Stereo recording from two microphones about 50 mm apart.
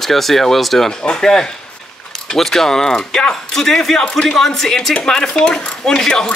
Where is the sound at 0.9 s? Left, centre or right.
Centre.